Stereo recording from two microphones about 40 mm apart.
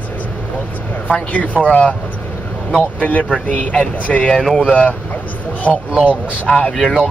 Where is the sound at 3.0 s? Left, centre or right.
Left.